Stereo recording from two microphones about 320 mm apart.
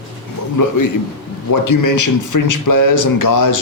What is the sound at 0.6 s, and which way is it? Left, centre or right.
A man's voice, left.